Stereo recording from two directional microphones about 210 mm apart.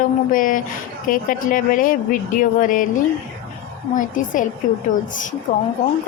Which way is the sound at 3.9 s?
40° left (ahead or behind).